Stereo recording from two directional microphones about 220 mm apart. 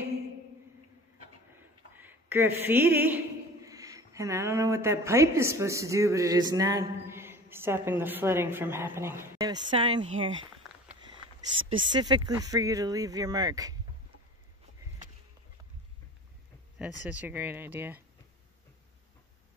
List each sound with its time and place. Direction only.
2.0 s speech: 10° right (ahead or behind)
10.6 s a sound: centre (ahead or behind)
11.9 s speech: 20° right (ahead or behind)
17.0 s speech: 5° right (ahead or behind)